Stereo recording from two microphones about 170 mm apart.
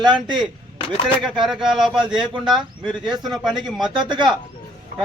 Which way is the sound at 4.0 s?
25° right (ahead or behind).